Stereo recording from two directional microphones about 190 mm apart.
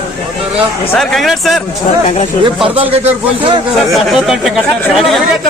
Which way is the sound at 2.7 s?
30° right (ahead or behind).